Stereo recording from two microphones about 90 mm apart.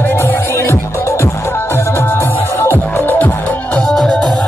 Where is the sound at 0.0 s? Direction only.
20° left (ahead or behind).